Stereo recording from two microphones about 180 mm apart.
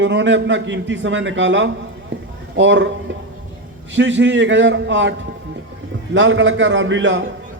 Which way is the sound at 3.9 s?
90° right.